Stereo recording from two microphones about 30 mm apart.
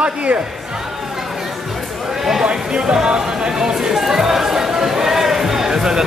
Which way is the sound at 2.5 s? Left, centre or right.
Right.